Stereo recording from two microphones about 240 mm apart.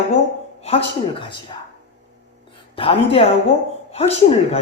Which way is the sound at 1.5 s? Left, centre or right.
Left.